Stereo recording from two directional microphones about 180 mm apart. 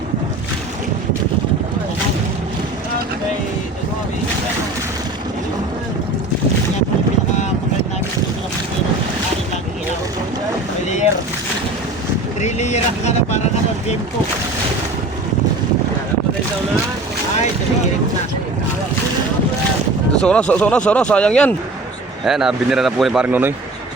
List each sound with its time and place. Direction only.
12.4 s vehicle: 40° left (ahead or behind)
20.2 s a man's voice: 5° left (ahead or behind); by 23.6 s 10° right (ahead or behind)